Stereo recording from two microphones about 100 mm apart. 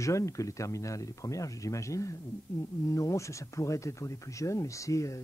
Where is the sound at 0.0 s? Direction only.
30° left (ahead or behind).